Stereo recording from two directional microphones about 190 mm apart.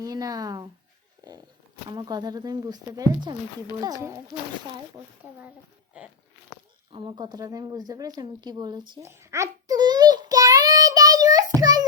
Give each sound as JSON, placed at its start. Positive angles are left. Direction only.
{"t": 0.0, "sound": "speech", "side_deg": -20}
{"t": 1.2, "sound": "a sound", "side_deg": -20}
{"t": 1.9, "sound": "a woman's voice", "side_deg": -20}
{"t": 6.9, "sound": "a woman's voice", "side_deg": -25}
{"t": 8.9, "sound": "a sound", "side_deg": -15}
{"t": 11.6, "sound": "child singing", "side_deg": -20}